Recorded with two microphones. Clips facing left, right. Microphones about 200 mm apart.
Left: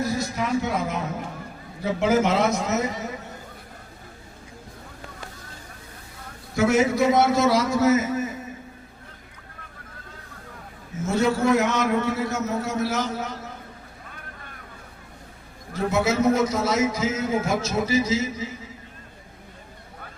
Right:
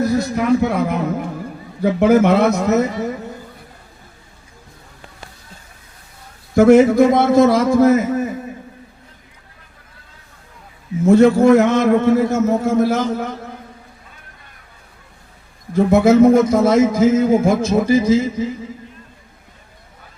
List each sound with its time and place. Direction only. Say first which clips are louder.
0.2 s speech: right 9 dB; 60° right (ahead or behind)
6.6 s a man's voice: right 10 dB; 55° right (ahead or behind)
11.0 s a man's voice: right 11 dB; 55° right (ahead or behind)
15.7 s a man's voice: right 11 dB; 55° right (ahead or behind)